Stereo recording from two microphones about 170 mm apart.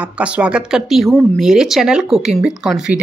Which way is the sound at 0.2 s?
5° right (ahead or behind).